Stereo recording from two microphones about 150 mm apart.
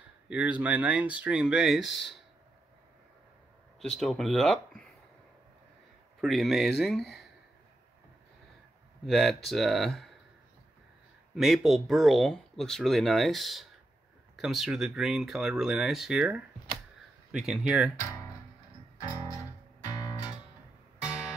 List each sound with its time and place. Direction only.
0.3 s speech: 10° right (ahead or behind)
3.8 s speech: centre (ahead or behind)
6.2 s speech: centre (ahead or behind)
9.0 s speech: centre (ahead or behind)
11.3 s speech: centre (ahead or behind)
19.3 s music: 20° left (ahead or behind)